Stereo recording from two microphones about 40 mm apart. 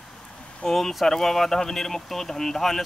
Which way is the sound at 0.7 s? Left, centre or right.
Centre.